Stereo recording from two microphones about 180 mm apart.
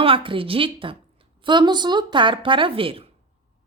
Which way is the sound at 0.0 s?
30° right (ahead or behind).